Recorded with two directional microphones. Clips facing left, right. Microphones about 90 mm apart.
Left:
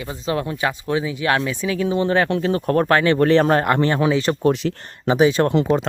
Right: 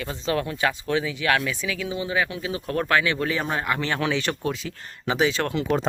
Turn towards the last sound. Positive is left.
turn(degrees=20)  # may be behind; listen again after turning